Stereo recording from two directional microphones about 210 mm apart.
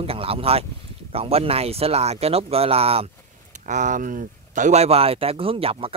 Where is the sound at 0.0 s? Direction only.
25° right (ahead or behind).